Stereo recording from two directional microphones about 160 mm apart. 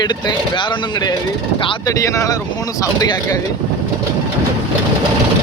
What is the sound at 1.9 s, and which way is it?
Speech, 20° left (ahead or behind).